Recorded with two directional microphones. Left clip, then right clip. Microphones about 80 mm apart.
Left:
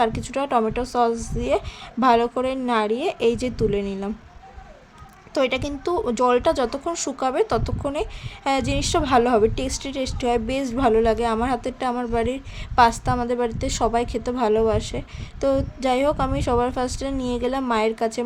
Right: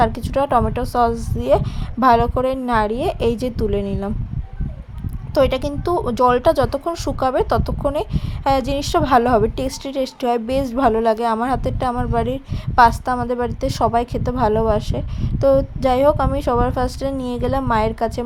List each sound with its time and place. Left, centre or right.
0.0 s a woman's voice: right
5.3 s a woman's voice: right